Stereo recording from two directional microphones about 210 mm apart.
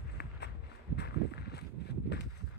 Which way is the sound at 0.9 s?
50° left (ahead or behind).